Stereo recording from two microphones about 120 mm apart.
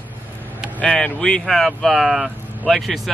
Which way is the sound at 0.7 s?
10° left (ahead or behind).